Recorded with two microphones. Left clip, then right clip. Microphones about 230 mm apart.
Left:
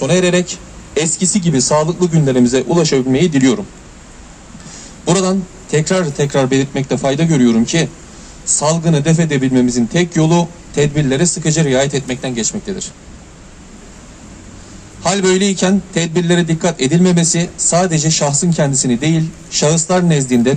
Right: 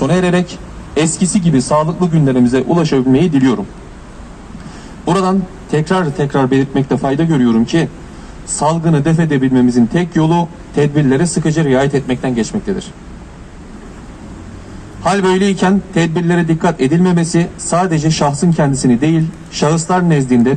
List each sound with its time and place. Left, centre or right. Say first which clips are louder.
0.0 s a man's voice: left 1 dB; left
5.0 s a man's voice: right 1 dB; left
15.0 s a man's voice: right 1 dB; left